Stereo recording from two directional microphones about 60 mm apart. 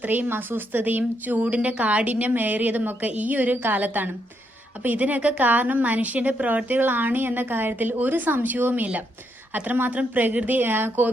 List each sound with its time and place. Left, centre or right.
0.0 s a woman's voice: right